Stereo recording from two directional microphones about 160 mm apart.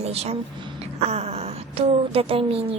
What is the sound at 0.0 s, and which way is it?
A woman's voice, 40° right (ahead or behind).